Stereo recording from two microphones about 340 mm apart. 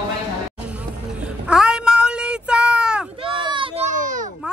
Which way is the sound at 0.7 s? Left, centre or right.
Centre.